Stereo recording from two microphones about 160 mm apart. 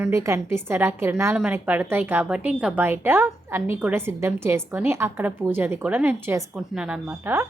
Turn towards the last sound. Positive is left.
turn(degrees=-15)  # may be behind; listen again after turning